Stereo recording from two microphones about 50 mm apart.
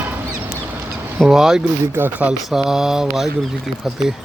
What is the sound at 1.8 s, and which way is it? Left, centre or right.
Speech, right.